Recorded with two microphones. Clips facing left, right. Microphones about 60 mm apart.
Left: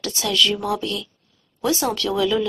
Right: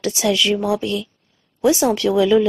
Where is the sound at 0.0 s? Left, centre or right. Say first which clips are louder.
Right 3 dB; centre.